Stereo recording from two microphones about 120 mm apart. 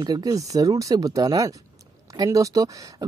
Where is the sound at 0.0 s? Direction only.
30° right (ahead or behind).